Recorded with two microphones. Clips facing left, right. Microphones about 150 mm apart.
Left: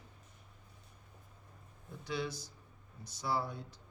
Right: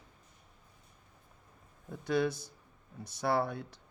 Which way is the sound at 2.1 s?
55° right (ahead or behind).